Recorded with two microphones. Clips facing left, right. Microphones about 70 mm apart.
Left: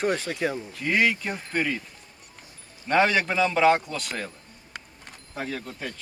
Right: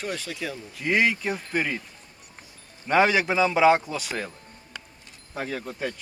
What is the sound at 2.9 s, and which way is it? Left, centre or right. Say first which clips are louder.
A man's voice: right 1 dB; centre.